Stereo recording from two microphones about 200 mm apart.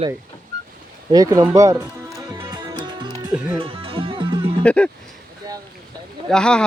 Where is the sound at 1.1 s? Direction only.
15° right (ahead or behind).